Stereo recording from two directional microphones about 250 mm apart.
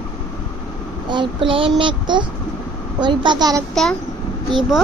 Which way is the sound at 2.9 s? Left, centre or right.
Centre.